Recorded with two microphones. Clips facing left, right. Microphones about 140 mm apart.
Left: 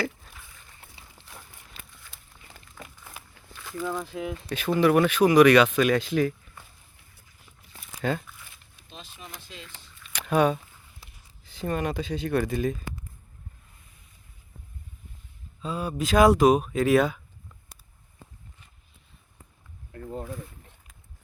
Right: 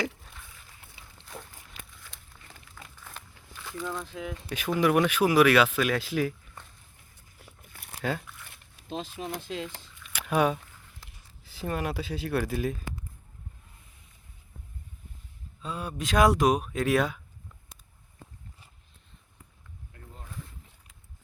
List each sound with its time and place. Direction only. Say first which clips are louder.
0.3 s a sound: left 1 dB; centre (ahead or behind)
3.5 s speech: left 4 dB; centre (ahead or behind)
4.4 s speech: left 3 dB; 10° right (ahead or behind)
8.0 s speech: left 3 dB; 5° right (ahead or behind)
8.4 s speech: right 11 dB; 90° right
10.0 s a sound: left 3 dB; 10° right (ahead or behind)
11.4 s speech: left 3 dB; 5° right (ahead or behind)
15.6 s speech: left 5 dB; centre (ahead or behind)
19.9 s a sound: left 17 dB; 60° left (ahead or behind)